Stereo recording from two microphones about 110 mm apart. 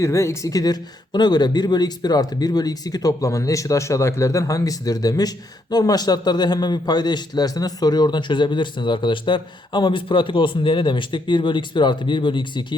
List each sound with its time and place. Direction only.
0.0 s a man's voice: 25° left (ahead or behind); by 12.6 s 50° left (ahead or behind)